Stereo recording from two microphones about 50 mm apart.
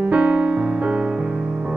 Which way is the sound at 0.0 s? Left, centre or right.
Right.